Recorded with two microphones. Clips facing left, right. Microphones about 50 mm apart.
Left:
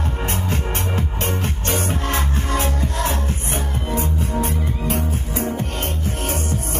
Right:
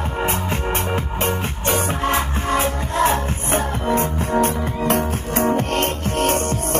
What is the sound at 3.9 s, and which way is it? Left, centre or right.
Music, right.